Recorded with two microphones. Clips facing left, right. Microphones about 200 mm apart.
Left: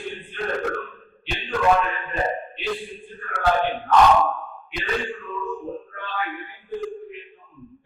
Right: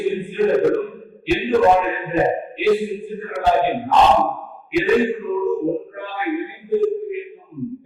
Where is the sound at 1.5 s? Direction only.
25° right (ahead or behind).